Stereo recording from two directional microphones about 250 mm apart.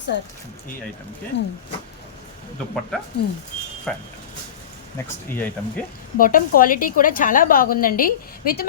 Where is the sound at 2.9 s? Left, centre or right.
Centre.